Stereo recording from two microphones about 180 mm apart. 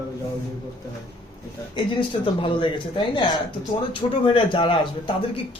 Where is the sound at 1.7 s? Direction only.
25° left (ahead or behind).